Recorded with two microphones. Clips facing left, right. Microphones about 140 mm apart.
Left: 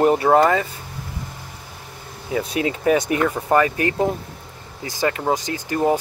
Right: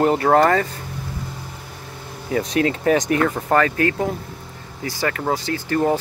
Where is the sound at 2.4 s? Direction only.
10° left (ahead or behind).